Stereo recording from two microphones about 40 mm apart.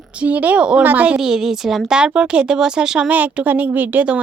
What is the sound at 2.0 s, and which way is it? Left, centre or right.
Speech, right.